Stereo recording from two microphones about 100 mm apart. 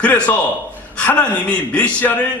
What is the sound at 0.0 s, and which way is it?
A man's voice, 15° left (ahead or behind).